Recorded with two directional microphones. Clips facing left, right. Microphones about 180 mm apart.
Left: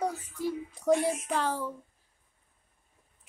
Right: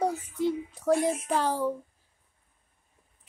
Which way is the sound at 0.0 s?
20° right (ahead or behind).